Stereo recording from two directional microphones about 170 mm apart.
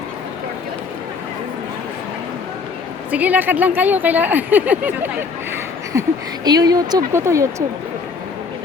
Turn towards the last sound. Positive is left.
turn(degrees=-15)  # may be behind; listen again after turning